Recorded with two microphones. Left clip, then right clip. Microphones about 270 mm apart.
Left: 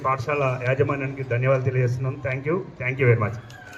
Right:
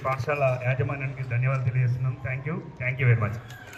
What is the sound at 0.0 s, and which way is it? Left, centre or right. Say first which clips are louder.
A man's voice: left 2 dB; left.